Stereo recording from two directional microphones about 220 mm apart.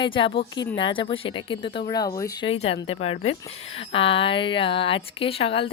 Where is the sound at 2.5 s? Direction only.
25° left (ahead or behind).